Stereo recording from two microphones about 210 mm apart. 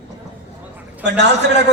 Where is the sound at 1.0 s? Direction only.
55° right (ahead or behind).